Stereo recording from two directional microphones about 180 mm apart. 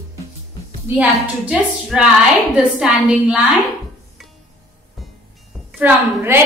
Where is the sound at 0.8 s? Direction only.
10° right (ahead or behind).